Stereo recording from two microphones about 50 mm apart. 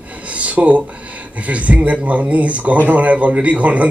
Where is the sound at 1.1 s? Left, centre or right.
Right.